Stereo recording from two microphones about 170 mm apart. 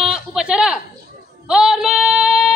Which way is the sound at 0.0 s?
5° right (ahead or behind).